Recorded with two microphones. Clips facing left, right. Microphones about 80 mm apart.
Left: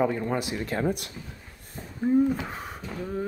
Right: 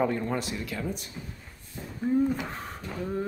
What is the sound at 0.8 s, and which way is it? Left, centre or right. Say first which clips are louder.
Speech: left 7 dB; left.